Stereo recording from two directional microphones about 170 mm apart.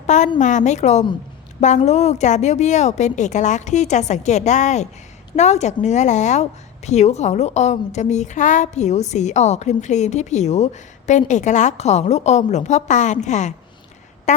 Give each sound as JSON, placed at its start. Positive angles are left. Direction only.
{"t": 0.3, "sound": "a woman's voice", "side_deg": 45}